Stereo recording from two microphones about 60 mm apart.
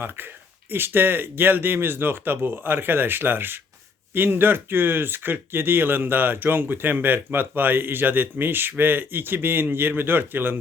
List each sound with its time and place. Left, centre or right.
0.7 s speech: right